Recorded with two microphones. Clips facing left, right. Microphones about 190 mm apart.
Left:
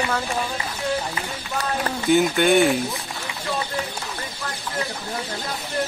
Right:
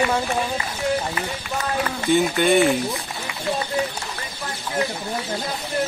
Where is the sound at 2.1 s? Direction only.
Centre (ahead or behind).